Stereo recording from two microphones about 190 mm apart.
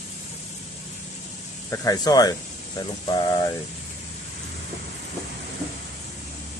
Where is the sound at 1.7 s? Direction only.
15° left (ahead or behind).